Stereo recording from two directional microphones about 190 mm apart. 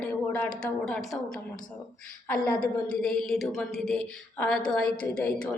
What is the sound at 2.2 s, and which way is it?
A woman's voice, 10° left (ahead or behind).